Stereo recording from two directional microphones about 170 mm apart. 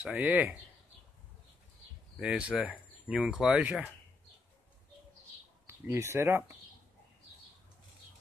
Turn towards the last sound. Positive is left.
turn(degrees=-15)  # may be behind; listen again after turning